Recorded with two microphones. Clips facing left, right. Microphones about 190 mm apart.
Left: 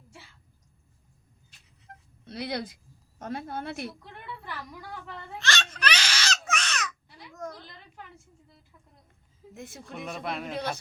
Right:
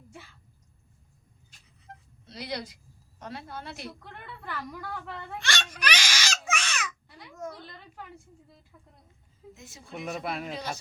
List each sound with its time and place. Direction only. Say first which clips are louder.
2.2 s a woman's voice: left 3 dB; 55° left (ahead or behind)
4.0 s a woman's voice: left 1 dB; 55° right (ahead or behind)
5.4 s baby cry: left 4 dB; 15° right (ahead or behind)
7.3 s a woman's voice: even; 10° right (ahead or behind)
9.6 s speech: left 3 dB; 55° left (ahead or behind)
10.1 s a man's voice: right 1 dB; 5° right (ahead or behind)
10.5 s speech: left 3 dB; 60° left (ahead or behind)